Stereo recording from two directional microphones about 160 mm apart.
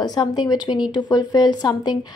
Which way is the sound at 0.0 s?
25° left (ahead or behind).